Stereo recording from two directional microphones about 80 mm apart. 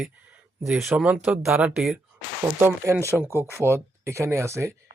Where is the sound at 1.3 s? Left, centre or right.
Centre.